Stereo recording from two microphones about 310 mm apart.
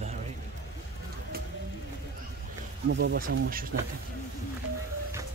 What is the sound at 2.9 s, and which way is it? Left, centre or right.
Speech, right.